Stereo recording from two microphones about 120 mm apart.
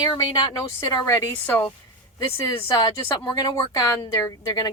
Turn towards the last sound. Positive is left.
turn(degrees=30)  # may be behind; listen again after turning